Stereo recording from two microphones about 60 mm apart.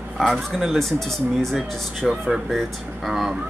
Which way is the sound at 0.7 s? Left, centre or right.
Centre.